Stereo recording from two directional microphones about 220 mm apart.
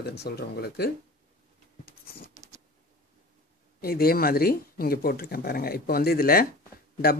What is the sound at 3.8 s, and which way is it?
Speech, 45° left (ahead or behind).